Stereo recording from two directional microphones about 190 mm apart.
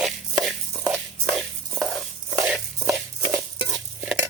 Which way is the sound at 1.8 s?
Centre (ahead or behind).